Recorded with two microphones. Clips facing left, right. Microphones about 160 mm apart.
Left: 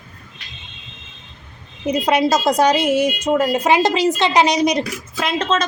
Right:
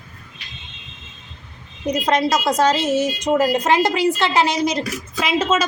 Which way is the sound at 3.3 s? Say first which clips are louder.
Right 2 dB; centre (ahead or behind).